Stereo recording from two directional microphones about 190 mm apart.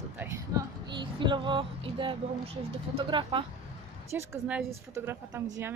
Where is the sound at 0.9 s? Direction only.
25° right (ahead or behind).